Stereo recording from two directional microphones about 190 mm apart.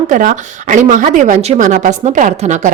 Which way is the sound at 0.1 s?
40° right (ahead or behind).